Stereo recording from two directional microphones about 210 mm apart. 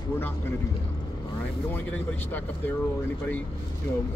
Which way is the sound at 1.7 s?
10° left (ahead or behind).